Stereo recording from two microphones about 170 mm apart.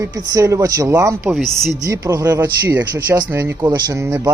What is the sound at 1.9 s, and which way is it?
Speech, 20° right (ahead or behind).